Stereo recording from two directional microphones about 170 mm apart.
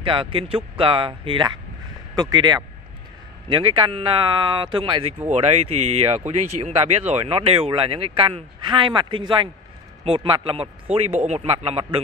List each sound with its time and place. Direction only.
0.0 s speech: 30° right (ahead or behind)